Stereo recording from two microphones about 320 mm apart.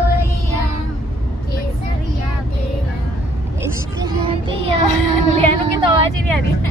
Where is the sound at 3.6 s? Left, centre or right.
Centre.